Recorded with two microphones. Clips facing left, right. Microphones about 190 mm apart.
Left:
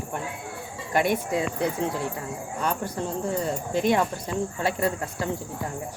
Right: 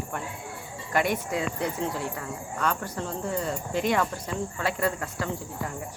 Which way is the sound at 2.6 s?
10° left (ahead or behind).